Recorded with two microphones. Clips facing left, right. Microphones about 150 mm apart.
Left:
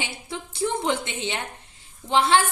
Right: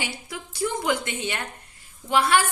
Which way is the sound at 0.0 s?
25° left (ahead or behind).